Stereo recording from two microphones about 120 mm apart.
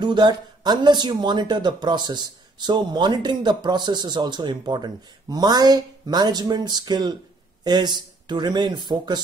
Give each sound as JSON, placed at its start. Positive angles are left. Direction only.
{"t": 0.0, "sound": "speech", "side_deg": -40}